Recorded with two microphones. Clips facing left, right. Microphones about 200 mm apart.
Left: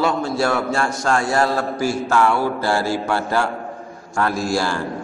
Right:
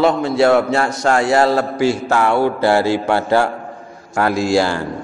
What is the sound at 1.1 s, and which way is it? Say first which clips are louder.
Speech: right 5 dB; 70° right (ahead or behind).